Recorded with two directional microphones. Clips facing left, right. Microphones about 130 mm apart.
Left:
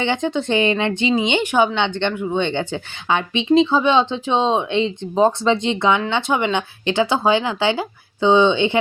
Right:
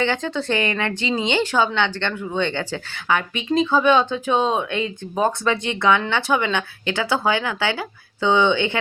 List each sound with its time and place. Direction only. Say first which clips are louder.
0.0 s a woman's voice: left 2 dB; 20° left (ahead or behind)